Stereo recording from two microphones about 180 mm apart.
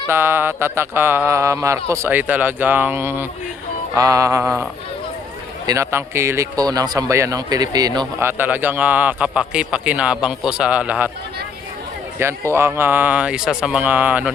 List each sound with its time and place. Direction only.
0.1 s speech: 10° right (ahead or behind)
5.6 s speech: 15° right (ahead or behind)
12.2 s speech: 15° right (ahead or behind)